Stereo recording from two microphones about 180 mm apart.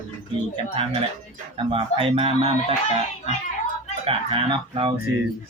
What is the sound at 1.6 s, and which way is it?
Speech, 30° right (ahead or behind).